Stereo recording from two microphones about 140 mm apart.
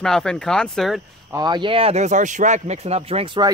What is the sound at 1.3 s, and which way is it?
Speech, 30° right (ahead or behind).